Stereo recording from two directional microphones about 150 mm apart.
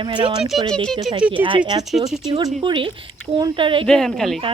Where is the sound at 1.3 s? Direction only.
35° right (ahead or behind).